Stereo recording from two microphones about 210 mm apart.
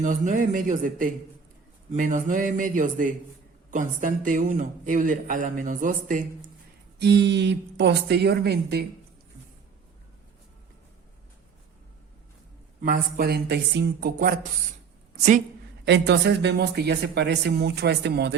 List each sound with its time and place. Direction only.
0.0 s a man's voice: 40° right (ahead or behind)
7.0 s speech: 55° right (ahead or behind)
12.8 s speech: 45° right (ahead or behind)
15.9 s speech: 55° right (ahead or behind)